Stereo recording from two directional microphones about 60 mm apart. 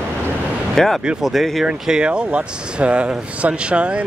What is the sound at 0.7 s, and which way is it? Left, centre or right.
Speech, centre.